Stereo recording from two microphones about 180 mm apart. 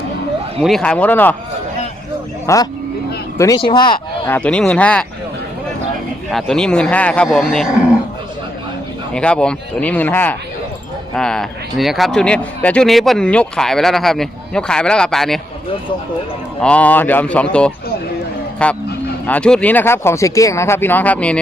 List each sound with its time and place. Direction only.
0.6 s speech: 5° left (ahead or behind)
2.5 s speech: 15° left (ahead or behind)
4.3 s speech: 5° left (ahead or behind)
6.3 s speech: 5° left (ahead or behind)
9.1 s speech: 5° left (ahead or behind)
16.6 s speech: 5° left (ahead or behind)